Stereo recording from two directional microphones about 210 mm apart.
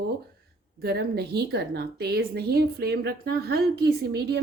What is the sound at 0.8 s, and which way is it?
A woman's voice, 50° right (ahead or behind).